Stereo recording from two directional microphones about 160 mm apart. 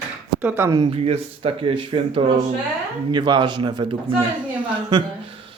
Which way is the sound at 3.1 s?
30° right (ahead or behind).